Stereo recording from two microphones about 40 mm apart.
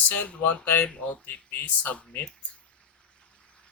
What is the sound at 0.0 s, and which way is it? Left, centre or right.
Speech, left.